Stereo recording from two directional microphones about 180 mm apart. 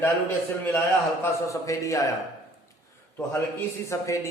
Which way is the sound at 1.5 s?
15° left (ahead or behind).